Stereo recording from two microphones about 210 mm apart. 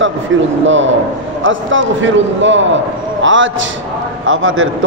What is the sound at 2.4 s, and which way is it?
A man's voice, 60° right (ahead or behind).